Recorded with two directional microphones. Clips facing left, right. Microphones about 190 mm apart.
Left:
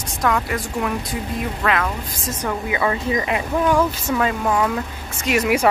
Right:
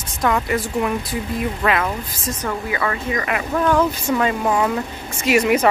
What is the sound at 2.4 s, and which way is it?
Speech, 15° left (ahead or behind).